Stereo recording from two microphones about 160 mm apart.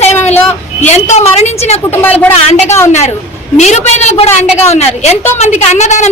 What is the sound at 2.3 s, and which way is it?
A woman's voice, 45° left (ahead or behind).